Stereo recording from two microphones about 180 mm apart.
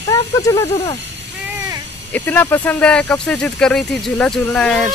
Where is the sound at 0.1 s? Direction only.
20° left (ahead or behind).